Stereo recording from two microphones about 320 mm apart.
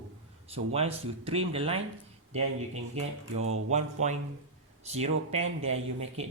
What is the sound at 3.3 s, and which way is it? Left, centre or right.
Speech, right.